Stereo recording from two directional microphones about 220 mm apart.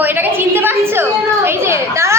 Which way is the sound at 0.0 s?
10° right (ahead or behind).